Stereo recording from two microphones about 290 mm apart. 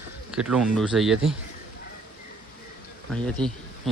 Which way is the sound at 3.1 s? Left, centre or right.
Centre.